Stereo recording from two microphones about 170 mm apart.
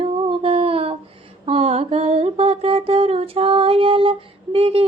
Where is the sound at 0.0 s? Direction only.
35° right (ahead or behind).